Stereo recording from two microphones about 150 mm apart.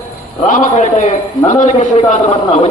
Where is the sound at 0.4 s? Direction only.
55° left (ahead or behind).